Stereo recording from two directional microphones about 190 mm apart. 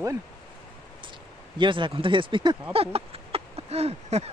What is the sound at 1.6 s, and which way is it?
Speech, 25° right (ahead or behind).